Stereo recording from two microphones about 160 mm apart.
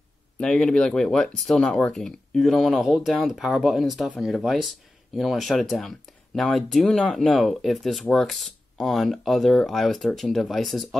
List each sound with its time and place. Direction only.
0.4 s speech: 5° left (ahead or behind)